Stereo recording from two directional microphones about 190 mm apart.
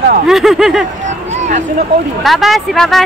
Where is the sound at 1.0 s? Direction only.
35° right (ahead or behind).